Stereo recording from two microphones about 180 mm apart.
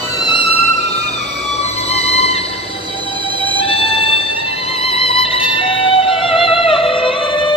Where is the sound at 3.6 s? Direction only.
30° left (ahead or behind).